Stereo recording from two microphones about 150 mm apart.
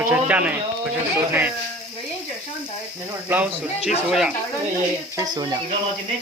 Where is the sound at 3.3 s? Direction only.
10° right (ahead or behind).